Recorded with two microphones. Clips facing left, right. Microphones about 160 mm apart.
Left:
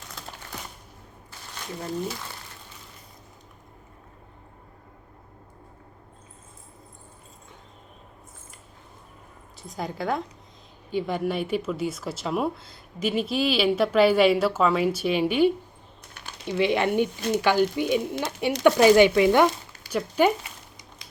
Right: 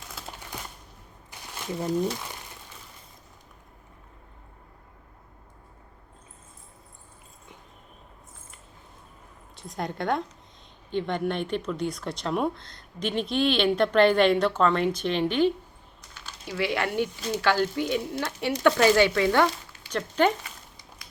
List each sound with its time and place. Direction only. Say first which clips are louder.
9.6 s speech: even; centre (ahead or behind)
16.5 s speech: left 5 dB; 20° left (ahead or behind)
17.2 s speech: left 5 dB; 50° left (ahead or behind)
17.4 s speech: left 1 dB; 15° left (ahead or behind)
20.4 s crumpling: left 1 dB; 20° left (ahead or behind)